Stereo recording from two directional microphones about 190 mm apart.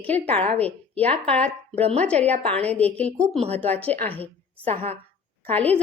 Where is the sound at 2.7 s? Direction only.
5° left (ahead or behind).